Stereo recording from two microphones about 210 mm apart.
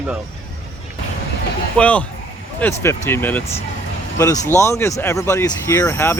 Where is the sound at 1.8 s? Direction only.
5° left (ahead or behind).